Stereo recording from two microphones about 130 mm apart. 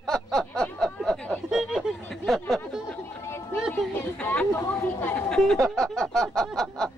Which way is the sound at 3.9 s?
15° left (ahead or behind).